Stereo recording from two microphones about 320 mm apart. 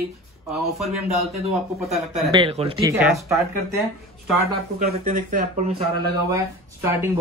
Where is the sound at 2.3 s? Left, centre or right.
Centre.